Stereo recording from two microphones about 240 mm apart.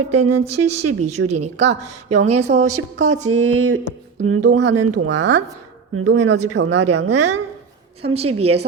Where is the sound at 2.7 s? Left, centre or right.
Right.